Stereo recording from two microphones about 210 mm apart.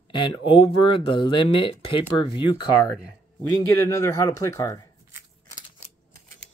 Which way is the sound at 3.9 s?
15° left (ahead or behind).